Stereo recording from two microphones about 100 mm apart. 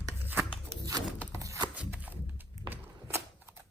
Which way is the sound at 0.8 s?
35° right (ahead or behind).